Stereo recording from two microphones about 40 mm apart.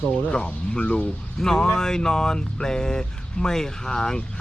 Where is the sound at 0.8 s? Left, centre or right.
Left.